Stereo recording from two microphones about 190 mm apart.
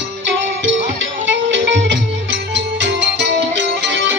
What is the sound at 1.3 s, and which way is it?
Music, 70° right (ahead or behind).